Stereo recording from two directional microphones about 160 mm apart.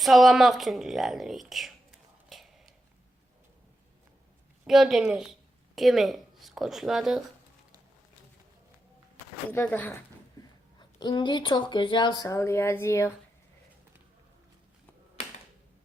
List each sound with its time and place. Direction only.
0.0 s speech: centre (ahead or behind)
4.6 s a woman's voice: centre (ahead or behind)
9.5 s speech: 10° left (ahead or behind)
10.4 s a sound: 20° left (ahead or behind)
10.8 s speech: 25° left (ahead or behind)